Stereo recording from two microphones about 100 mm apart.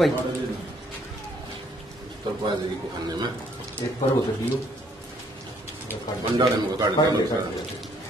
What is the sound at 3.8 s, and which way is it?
Speech, 45° left (ahead or behind).